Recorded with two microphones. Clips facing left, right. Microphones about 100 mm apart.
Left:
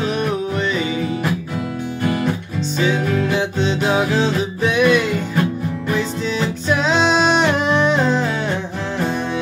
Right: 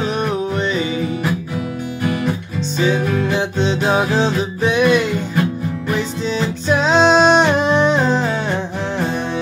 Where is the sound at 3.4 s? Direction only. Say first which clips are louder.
Right 1 dB; 25° right (ahead or behind).